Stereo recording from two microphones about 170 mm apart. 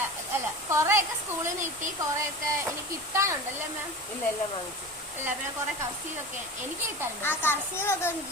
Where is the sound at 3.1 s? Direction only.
15° right (ahead or behind).